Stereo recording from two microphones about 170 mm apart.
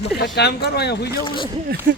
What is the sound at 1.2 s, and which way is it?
Speech, 30° left (ahead or behind).